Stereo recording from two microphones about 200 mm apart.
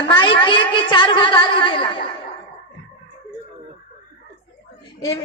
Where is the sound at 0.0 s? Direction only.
25° left (ahead or behind).